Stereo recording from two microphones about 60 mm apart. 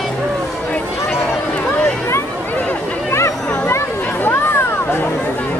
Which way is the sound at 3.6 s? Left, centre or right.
Left.